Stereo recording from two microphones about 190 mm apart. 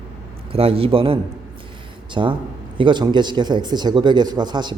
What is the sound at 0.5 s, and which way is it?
Speech, 30° right (ahead or behind).